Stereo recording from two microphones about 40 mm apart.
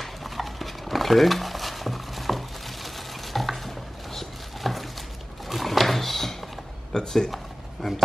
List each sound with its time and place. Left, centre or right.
0.0 s a sound: centre
6.9 s speech: centre
7.8 s speech: centre